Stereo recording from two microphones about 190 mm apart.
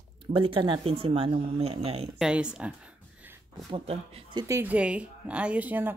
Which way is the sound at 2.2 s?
5° right (ahead or behind).